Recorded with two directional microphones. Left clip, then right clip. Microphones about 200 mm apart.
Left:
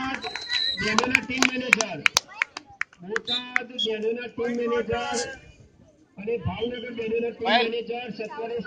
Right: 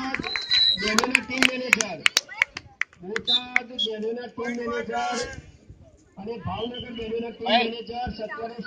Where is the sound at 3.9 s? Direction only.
50° right (ahead or behind).